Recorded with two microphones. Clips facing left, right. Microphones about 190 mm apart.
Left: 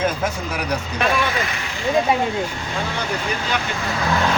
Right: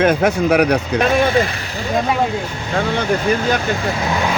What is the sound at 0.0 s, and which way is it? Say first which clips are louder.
Speech: right 8 dB; 65° right (ahead or behind).